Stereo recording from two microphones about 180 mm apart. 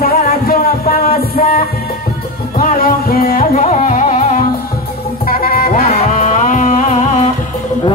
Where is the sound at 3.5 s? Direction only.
40° left (ahead or behind).